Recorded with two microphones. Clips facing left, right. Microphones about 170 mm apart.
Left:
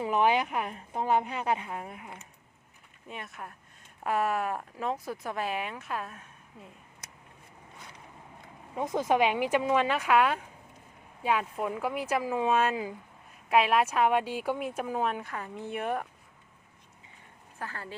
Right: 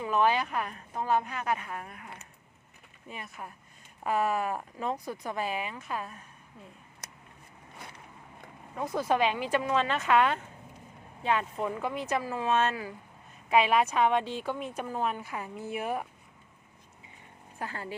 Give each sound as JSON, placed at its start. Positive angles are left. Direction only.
{"t": 0.1, "sound": "a woman's voice", "side_deg": 15}
{"t": 3.1, "sound": "speech", "side_deg": 0}
{"t": 8.7, "sound": "speech", "side_deg": 20}
{"t": 17.6, "sound": "speech", "side_deg": -15}